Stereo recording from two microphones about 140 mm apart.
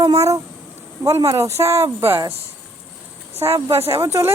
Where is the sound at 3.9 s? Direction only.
20° right (ahead or behind).